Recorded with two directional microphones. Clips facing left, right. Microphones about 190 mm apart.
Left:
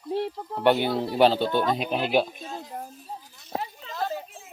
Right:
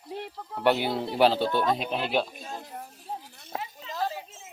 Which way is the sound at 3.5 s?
35° left (ahead or behind).